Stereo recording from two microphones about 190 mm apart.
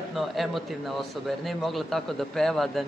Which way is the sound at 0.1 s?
Centre (ahead or behind).